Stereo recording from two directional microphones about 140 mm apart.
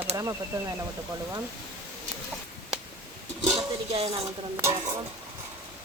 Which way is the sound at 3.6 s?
45° right (ahead or behind).